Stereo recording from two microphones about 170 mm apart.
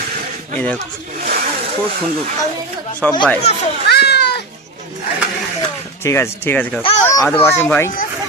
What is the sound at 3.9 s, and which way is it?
Cat, 75° left (ahead or behind).